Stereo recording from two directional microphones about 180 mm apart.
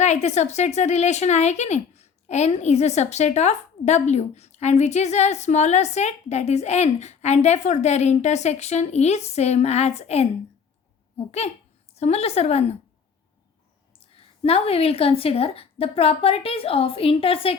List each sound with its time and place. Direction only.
0.0 s speech: 40° left (ahead or behind)
11.3 s speech: 35° left (ahead or behind)
14.0 s speech: 30° left (ahead or behind)